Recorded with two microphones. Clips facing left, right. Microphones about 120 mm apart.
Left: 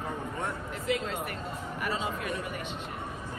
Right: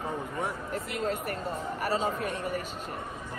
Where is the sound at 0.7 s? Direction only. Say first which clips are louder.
Left 2 dB; 40° right (ahead or behind).